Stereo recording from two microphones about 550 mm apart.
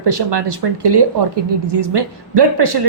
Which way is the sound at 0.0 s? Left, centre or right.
Right.